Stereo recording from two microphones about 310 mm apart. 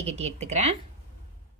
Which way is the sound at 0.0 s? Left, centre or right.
Right.